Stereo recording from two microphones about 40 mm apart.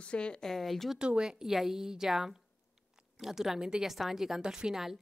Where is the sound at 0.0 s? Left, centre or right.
Left.